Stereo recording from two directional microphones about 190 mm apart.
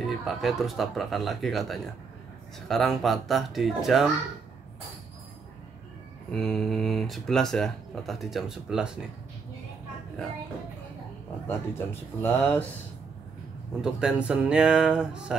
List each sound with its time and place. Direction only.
0.0 s speech: centre (ahead or behind)
6.3 s speech: centre (ahead or behind)
11.4 s speech: 10° left (ahead or behind)
13.7 s speech: 5° right (ahead or behind)